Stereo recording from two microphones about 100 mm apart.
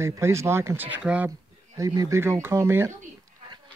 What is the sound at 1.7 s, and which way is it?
Speech, 35° right (ahead or behind).